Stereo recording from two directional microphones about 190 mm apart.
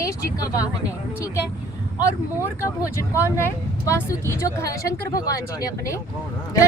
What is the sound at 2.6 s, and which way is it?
Speech, 15° left (ahead or behind).